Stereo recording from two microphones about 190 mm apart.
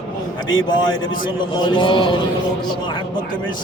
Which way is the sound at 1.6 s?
25° left (ahead or behind).